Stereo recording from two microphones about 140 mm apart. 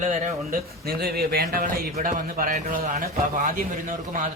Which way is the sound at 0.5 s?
90° right.